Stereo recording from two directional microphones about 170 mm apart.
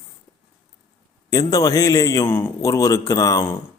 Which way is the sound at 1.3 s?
20° left (ahead or behind).